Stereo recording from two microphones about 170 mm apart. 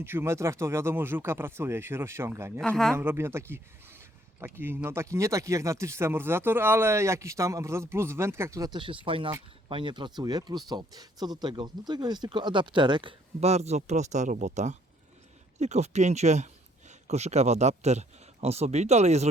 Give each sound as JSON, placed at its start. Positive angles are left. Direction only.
{"t": 0.0, "sound": "speech", "side_deg": -15}
{"t": 2.6, "sound": "speech", "side_deg": 5}
{"t": 3.0, "sound": "speech", "side_deg": -15}